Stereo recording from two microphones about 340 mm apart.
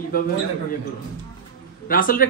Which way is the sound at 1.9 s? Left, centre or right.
Left.